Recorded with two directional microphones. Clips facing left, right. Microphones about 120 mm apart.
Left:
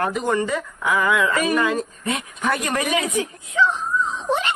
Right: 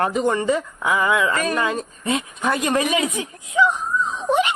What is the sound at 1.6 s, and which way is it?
Speech, 20° right (ahead or behind).